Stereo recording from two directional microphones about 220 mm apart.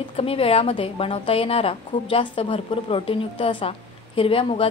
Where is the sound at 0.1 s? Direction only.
25° left (ahead or behind).